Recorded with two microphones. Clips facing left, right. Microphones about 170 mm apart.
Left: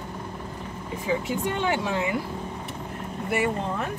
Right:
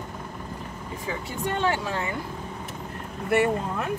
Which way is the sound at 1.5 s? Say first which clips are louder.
Right 2 dB; 15° left (ahead or behind).